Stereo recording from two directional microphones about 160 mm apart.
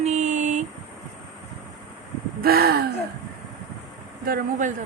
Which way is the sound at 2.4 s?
70° right (ahead or behind).